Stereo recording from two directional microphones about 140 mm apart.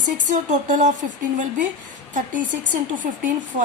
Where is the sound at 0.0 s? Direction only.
65° right (ahead or behind).